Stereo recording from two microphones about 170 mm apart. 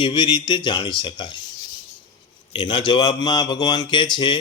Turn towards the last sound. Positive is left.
turn(degrees=25)  # may be behind; listen again after turning